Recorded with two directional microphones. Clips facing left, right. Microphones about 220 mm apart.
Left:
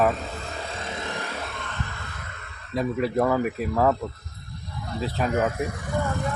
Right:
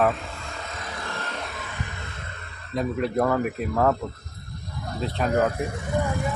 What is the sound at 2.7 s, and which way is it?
Speech, centre (ahead or behind).